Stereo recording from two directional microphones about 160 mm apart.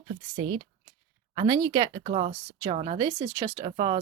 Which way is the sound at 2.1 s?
40° right (ahead or behind).